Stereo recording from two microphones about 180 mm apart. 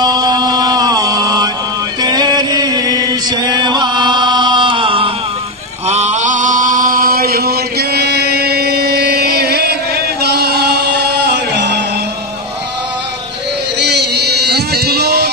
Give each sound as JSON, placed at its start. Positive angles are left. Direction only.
{"t": 0.0, "sound": "a sound", "side_deg": -20}
{"t": 2.0, "sound": "chant", "side_deg": -20}
{"t": 13.7, "sound": "music", "side_deg": -70}